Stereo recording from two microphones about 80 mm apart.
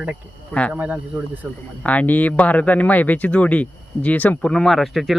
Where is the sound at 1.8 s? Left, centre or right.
Centre.